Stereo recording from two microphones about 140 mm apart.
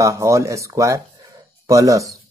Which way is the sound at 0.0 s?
20° right (ahead or behind).